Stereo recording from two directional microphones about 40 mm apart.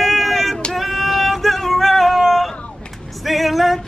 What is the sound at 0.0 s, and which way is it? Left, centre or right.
Vehicle, centre.